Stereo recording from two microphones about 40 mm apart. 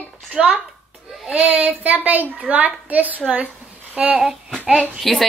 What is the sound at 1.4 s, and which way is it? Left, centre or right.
A woman's voice, right.